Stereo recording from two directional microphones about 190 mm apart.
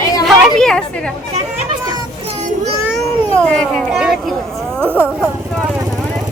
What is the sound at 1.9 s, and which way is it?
Children playing, 25° right (ahead or behind).